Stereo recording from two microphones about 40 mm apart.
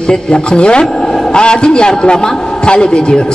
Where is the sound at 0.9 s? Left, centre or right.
Centre.